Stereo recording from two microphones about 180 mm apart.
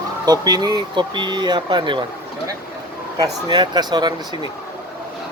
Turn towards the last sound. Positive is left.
turn(degrees=-25)  # may be behind; listen again after turning